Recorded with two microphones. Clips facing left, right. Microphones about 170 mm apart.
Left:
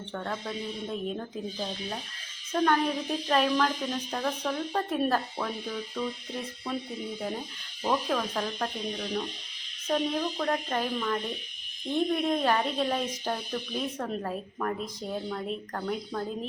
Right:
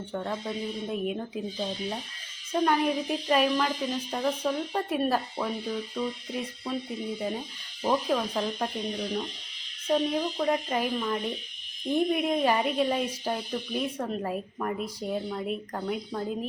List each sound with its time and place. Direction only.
0.1 s speech: 10° right (ahead or behind)
2.5 s speech: 10° right (ahead or behind)
7.9 s speech: 10° right (ahead or behind)
9.8 s speech: 10° right (ahead or behind)